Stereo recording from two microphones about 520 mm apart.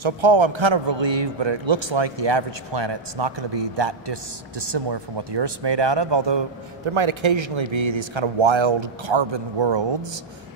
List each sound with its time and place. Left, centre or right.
0.0 s a man's voice: right
6.9 s speech: right